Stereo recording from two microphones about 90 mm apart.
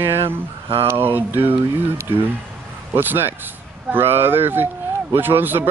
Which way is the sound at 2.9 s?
25° right (ahead or behind).